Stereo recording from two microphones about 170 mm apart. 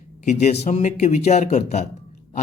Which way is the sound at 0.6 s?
45° left (ahead or behind).